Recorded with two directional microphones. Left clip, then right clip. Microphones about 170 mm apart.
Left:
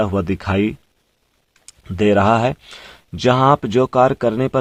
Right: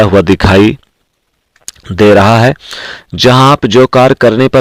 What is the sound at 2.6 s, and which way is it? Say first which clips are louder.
Speech: right 15 dB; 25° right (ahead or behind).